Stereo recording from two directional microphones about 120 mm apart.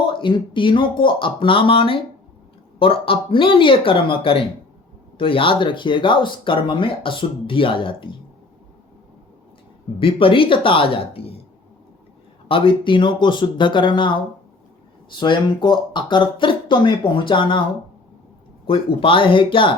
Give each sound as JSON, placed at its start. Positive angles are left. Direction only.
{"t": 0.0, "sound": "speech", "side_deg": 45}
{"t": 10.0, "sound": "speech", "side_deg": 50}
{"t": 12.5, "sound": "speech", "side_deg": 45}
{"t": 15.1, "sound": "speech", "side_deg": 40}
{"t": 18.6, "sound": "speech", "side_deg": 50}